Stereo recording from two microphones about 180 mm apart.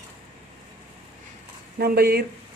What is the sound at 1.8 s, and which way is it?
Speech, 60° right (ahead or behind).